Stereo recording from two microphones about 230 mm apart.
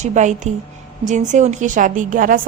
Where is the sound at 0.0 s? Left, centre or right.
Right.